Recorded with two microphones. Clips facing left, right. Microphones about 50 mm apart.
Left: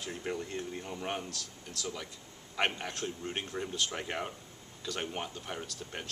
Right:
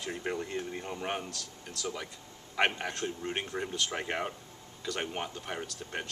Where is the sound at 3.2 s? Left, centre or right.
Right.